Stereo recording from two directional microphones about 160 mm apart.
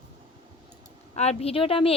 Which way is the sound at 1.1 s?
40° left (ahead or behind).